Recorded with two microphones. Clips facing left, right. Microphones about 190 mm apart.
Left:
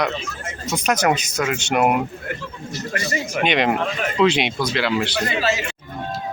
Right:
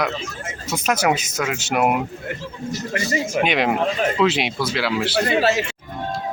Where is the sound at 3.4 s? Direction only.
5° right (ahead or behind).